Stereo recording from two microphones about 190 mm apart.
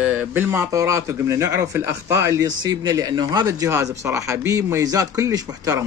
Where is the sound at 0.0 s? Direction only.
10° right (ahead or behind).